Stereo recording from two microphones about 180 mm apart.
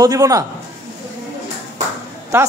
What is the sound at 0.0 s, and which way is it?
Speech, 20° right (ahead or behind).